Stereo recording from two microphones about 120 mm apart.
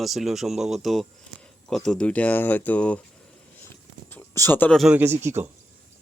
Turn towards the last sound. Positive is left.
turn(degrees=-20)  # may be behind; listen again after turning